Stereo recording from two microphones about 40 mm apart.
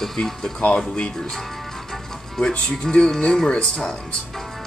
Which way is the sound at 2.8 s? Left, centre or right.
Centre.